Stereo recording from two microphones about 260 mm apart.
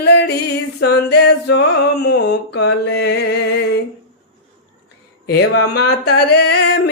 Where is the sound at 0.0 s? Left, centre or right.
Left.